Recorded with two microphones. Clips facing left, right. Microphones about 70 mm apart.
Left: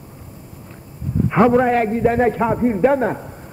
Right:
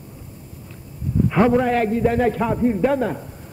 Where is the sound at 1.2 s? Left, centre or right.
Left.